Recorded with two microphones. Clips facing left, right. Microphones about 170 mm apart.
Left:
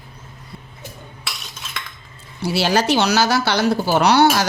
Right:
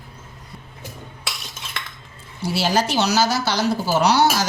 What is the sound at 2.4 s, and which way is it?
Speech, 70° left (ahead or behind).